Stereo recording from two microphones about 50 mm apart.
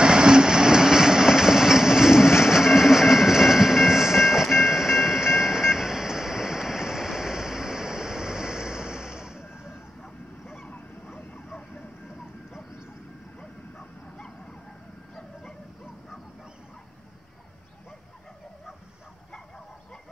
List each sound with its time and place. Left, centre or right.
0.0 s train: centre
9.4 s vehicle: left
10.4 s honk: centre
11.1 s vehicle: left
14.1 s vehicle: centre